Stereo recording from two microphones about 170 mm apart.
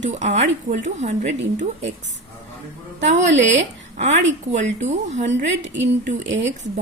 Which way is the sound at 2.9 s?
45° right (ahead or behind).